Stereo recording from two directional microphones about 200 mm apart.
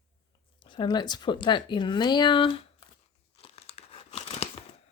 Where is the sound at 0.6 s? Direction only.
25° left (ahead or behind).